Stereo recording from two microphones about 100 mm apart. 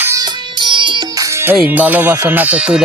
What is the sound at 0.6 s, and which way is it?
Music, 55° right (ahead or behind).